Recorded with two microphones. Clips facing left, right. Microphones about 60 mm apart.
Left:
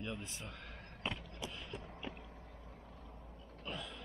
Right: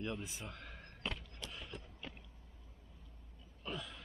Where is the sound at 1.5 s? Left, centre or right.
Centre.